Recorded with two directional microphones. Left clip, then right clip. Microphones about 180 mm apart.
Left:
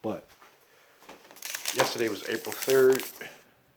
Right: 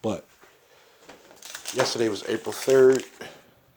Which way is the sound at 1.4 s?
20° left (ahead or behind).